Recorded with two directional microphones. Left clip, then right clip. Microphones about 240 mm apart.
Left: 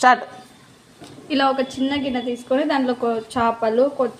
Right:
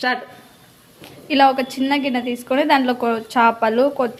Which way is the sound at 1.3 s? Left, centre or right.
Right.